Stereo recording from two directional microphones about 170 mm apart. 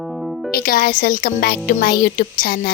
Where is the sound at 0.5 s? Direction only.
60° left (ahead or behind).